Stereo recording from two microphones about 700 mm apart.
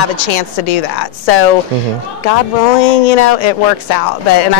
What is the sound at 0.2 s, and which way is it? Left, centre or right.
Speech, left.